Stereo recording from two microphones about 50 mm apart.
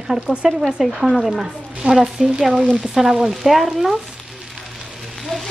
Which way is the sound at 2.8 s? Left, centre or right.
Centre.